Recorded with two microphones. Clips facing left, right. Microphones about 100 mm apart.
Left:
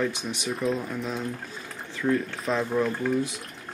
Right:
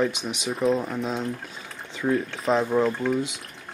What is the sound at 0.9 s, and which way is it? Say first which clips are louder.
Speech: right 3 dB; 25° right (ahead or behind).